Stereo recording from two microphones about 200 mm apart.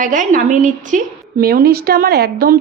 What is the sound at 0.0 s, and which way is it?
A woman's voice, 40° right (ahead or behind).